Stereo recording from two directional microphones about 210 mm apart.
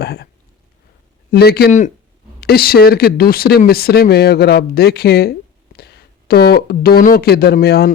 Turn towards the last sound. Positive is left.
turn(degrees=50)  # may be behind; listen again after turning